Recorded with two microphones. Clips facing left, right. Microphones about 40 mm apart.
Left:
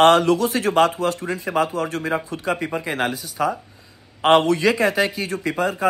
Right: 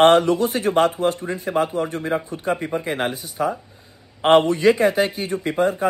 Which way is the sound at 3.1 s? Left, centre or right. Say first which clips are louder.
Left 2 dB; right.